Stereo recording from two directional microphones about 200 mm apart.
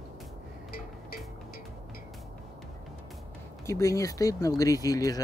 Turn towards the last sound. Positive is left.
turn(degrees=20)  # may be behind; listen again after turning